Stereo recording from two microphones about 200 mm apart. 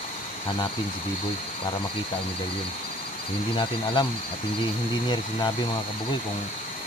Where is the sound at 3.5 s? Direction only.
25° left (ahead or behind).